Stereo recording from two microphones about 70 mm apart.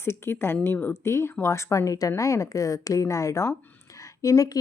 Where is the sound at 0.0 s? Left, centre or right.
Left.